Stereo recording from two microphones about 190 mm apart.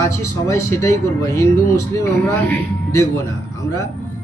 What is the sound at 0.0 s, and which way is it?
Speech, 15° left (ahead or behind).